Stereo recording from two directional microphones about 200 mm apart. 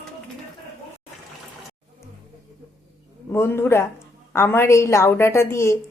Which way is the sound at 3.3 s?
10° left (ahead or behind).